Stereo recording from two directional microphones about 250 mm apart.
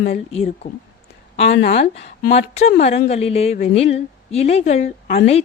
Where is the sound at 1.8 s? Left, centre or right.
Left.